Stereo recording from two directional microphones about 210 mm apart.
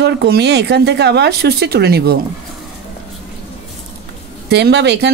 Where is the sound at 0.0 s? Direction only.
55° right (ahead or behind).